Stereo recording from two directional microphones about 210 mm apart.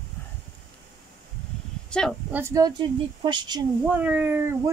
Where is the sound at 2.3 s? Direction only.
15° right (ahead or behind).